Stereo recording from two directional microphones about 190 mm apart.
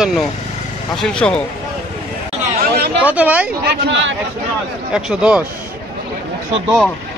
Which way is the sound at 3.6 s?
75° right (ahead or behind).